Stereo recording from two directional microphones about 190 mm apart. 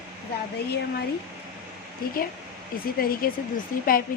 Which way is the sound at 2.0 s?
50° left (ahead or behind).